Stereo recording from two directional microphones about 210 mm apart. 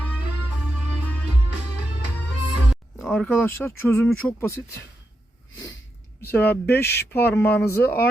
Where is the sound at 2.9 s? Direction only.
Centre (ahead or behind).